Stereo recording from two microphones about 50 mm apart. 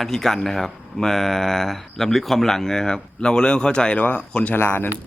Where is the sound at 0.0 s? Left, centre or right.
Centre.